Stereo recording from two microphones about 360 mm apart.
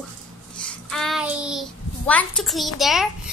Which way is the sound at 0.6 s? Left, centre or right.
Centre.